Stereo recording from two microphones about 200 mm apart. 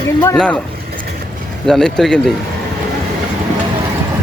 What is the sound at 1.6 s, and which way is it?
Speech, centre (ahead or behind).